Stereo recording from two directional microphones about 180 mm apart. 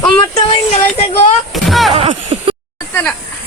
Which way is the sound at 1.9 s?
35° right (ahead or behind).